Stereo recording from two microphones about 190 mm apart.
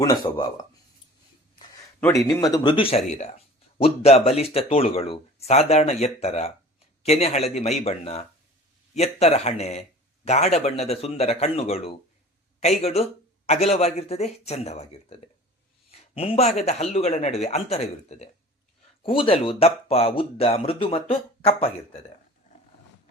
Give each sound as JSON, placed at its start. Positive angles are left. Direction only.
{"t": 0.0, "sound": "speech", "side_deg": 20}
{"t": 2.0, "sound": "speech", "side_deg": 15}